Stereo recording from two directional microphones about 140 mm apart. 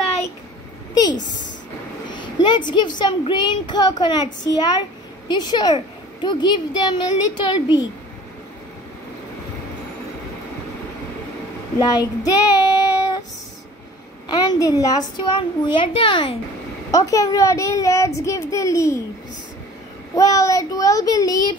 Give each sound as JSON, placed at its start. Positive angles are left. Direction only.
{"t": 2.0, "sound": "a sound", "side_deg": 30}
{"t": 3.0, "sound": "a woman's voice", "side_deg": 30}
{"t": 11.8, "sound": "child singing", "side_deg": 25}
{"t": 14.3, "sound": "a child's voice", "side_deg": 30}
{"t": 16.9, "sound": "a child's voice", "side_deg": 25}
{"t": 20.2, "sound": "a child's voice", "side_deg": 25}